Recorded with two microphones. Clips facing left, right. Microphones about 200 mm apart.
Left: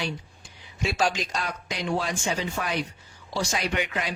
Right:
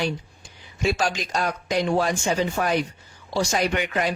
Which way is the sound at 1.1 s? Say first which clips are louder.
Right 5 dB; 45° right (ahead or behind).